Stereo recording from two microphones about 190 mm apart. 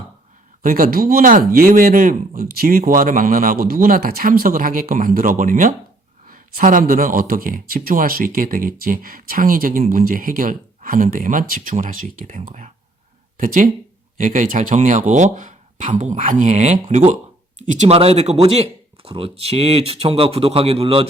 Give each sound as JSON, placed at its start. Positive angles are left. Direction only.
{"t": 0.6, "sound": "speech", "side_deg": -45}